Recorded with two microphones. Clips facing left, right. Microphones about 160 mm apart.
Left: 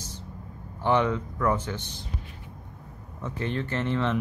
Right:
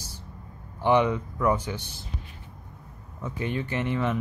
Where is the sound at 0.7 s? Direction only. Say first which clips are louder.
Right 2 dB; 15° right (ahead or behind).